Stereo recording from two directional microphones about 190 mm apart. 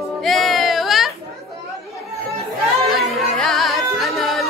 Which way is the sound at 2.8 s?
Centre (ahead or behind).